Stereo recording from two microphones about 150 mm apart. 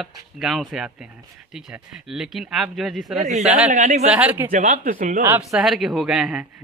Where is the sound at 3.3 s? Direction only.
50° right (ahead or behind).